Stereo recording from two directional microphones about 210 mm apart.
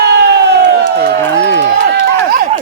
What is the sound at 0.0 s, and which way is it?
Crowd, 50° right (ahead or behind).